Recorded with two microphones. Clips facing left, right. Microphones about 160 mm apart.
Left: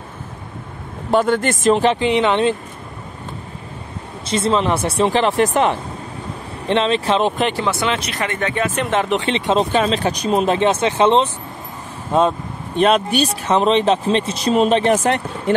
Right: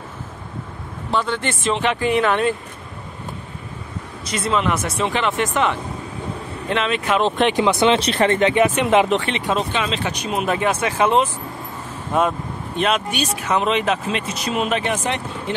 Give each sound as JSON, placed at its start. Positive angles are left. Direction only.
{"t": 1.1, "sound": "speech", "side_deg": 45}
{"t": 2.0, "sound": "speech", "side_deg": 20}
{"t": 4.3, "sound": "speech", "side_deg": 30}
{"t": 7.5, "sound": "speech", "side_deg": -20}
{"t": 9.1, "sound": "speech", "side_deg": 25}
{"t": 9.7, "sound": "speech", "side_deg": 40}